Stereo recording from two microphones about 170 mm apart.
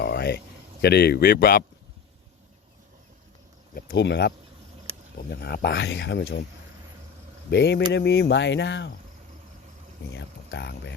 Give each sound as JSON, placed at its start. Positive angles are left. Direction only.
{"t": 0.0, "sound": "a sound", "side_deg": 75}
{"t": 3.8, "sound": "speech", "side_deg": 75}
{"t": 5.3, "sound": "speech", "side_deg": 75}
{"t": 7.5, "sound": "speech", "side_deg": 80}
{"t": 10.1, "sound": "speech", "side_deg": 90}